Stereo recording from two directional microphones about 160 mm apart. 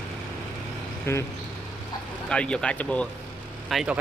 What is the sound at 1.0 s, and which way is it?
Speech, 15° left (ahead or behind).